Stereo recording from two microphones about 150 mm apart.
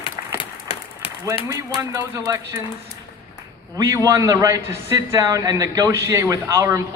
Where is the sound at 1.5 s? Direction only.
20° right (ahead or behind).